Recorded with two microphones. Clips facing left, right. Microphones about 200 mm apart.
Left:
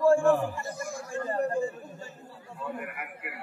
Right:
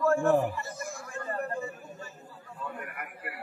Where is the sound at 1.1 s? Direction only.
35° left (ahead or behind).